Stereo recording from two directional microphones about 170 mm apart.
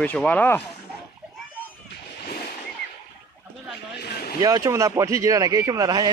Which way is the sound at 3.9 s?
70° left (ahead or behind).